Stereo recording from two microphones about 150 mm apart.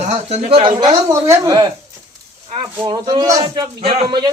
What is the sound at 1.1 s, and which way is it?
Speech, 20° right (ahead or behind).